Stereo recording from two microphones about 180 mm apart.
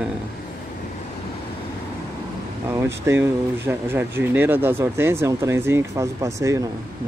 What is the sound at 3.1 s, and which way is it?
Speech, 15° right (ahead or behind).